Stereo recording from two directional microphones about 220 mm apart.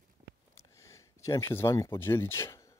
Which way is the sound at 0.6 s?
15° left (ahead or behind).